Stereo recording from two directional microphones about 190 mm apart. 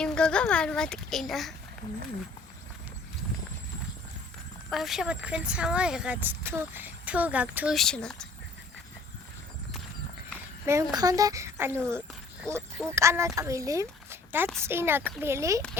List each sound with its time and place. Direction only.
0.0 s speech: 5° left (ahead or behind)
4.7 s speech: centre (ahead or behind)
10.7 s speech: 15° right (ahead or behind)